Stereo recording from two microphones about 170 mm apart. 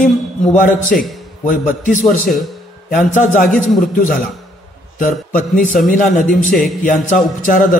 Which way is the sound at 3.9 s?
50° left (ahead or behind).